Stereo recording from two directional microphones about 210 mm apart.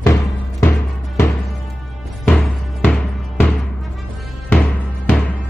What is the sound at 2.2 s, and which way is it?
Music, 5° left (ahead or behind).